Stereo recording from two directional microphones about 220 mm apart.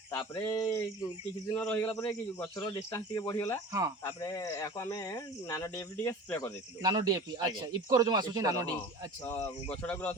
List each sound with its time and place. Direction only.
0.2 s speech: 15° left (ahead or behind)
3.7 s speech: 15° right (ahead or behind)
4.0 s speech: 15° left (ahead or behind)
6.8 s speech: 20° right (ahead or behind)
9.8 s speech: 5° left (ahead or behind)